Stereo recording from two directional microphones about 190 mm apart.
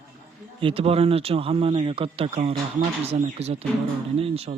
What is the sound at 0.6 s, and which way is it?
Speech, 30° right (ahead or behind).